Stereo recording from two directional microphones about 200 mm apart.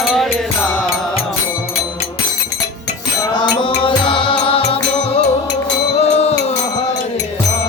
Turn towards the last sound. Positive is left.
turn(degrees=30)  # may be behind; listen again after turning